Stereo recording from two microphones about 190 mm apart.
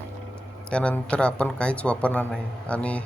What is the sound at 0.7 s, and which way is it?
A man's voice, 5° left (ahead or behind).